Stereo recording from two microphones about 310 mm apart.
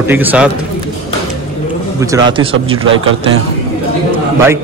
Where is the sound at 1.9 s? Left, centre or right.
Centre.